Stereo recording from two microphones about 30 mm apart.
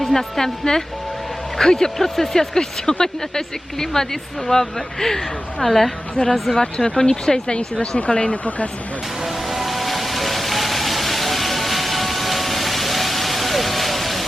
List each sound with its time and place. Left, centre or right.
0.0 s speech: centre
6.2 s speech: left
6.5 s speech: centre
7.8 s speech: left
8.4 s speech: left
9.2 s vehicle: centre